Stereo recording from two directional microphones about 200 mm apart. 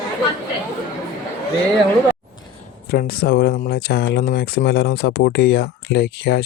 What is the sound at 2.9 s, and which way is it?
Speech, 50° left (ahead or behind).